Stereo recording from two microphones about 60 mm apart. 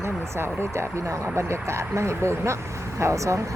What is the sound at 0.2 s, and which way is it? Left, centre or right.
Speech, right.